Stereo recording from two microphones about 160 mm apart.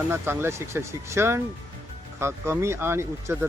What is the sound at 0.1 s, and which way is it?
Speech, 15° right (ahead or behind).